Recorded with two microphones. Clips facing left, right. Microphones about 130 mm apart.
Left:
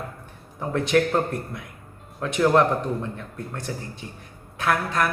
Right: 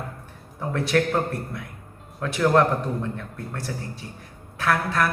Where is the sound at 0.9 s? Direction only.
Centre (ahead or behind).